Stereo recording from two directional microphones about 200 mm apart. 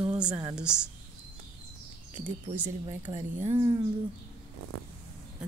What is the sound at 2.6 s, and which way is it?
Speech, 35° right (ahead or behind).